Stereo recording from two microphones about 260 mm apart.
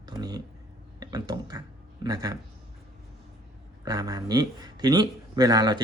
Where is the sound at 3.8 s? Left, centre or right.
Centre.